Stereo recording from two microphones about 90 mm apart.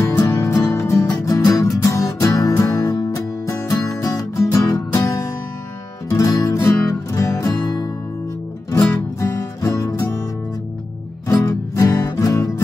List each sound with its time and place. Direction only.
0.2 s music: 40° left (ahead or behind)
9.2 s music: 35° left (ahead or behind)
11.2 s music: 35° left (ahead or behind)